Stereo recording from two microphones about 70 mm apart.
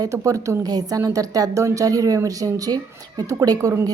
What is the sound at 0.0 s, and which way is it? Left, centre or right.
Speech, right.